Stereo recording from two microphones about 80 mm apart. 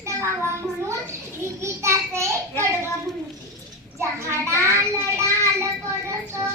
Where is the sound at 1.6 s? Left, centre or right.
Right.